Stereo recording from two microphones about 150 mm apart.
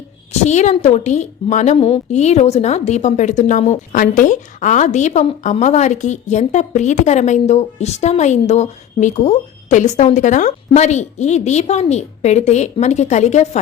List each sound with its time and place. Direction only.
0.4 s a woman's voice: 50° left (ahead or behind)